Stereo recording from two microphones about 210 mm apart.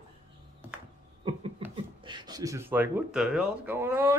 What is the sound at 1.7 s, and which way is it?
Speech, 20° right (ahead or behind).